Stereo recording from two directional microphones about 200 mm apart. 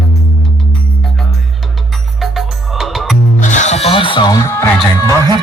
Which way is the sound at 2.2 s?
Centre (ahead or behind).